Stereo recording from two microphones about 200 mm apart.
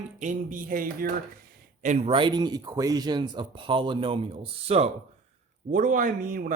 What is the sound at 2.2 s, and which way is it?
A man's voice, 25° right (ahead or behind).